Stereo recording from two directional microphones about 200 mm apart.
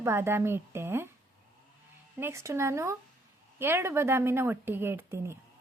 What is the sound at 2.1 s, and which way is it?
A woman's voice, 15° right (ahead or behind).